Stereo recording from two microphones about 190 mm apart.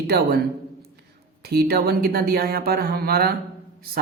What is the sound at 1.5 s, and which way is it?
Speech, 55° right (ahead or behind).